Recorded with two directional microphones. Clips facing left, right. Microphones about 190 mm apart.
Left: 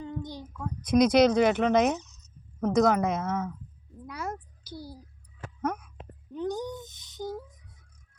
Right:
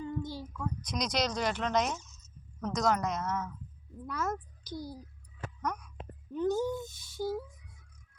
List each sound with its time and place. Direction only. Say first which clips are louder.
0.0 s child singing: even; 20° left (ahead or behind)
0.4 s speech: even; 55° left (ahead or behind)
2.0 s a sound: left 8 dB; 20° left (ahead or behind)
2.6 s speech: left 7 dB; 55° left (ahead or behind)
4.0 s a child's voice: right 1 dB; 10° left (ahead or behind)
5.6 s speech: left 6 dB; 50° left (ahead or behind)
6.3 s speech: right 2 dB; 15° left (ahead or behind)